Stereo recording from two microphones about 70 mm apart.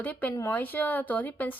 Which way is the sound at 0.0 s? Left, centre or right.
Left.